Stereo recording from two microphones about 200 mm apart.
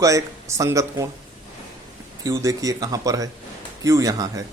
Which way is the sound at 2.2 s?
15° right (ahead or behind).